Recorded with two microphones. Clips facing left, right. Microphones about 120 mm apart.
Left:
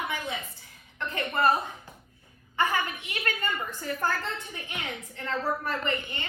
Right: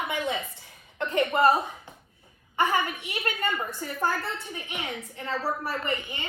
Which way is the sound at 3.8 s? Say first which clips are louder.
Even; 20° right (ahead or behind).